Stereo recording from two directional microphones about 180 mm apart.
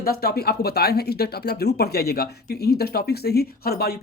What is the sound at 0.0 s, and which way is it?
Speech, 60° left (ahead or behind).